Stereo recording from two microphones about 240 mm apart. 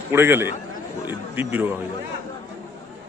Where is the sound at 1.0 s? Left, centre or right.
Centre.